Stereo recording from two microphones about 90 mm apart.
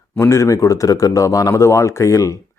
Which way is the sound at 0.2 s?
30° left (ahead or behind).